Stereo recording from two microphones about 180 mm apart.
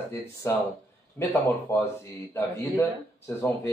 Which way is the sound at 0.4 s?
15° left (ahead or behind).